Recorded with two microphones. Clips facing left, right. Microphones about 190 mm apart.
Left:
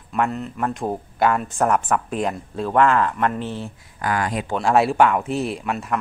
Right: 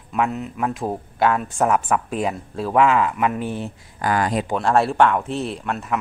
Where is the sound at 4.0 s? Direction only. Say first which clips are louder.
Right 3 dB; 30° right (ahead or behind).